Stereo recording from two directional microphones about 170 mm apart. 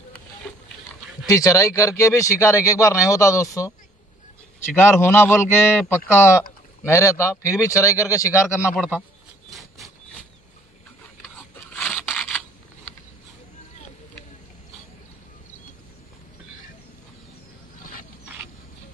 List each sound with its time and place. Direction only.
1.2 s speech: 20° left (ahead or behind)
5.0 s speech: 15° left (ahead or behind)
8.7 s speech: 5° right (ahead or behind)
11.8 s scissors: 5° left (ahead or behind)